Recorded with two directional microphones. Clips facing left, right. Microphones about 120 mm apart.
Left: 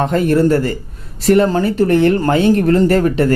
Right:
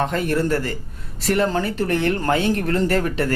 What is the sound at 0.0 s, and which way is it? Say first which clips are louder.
Speech: left 8 dB; 30° left (ahead or behind).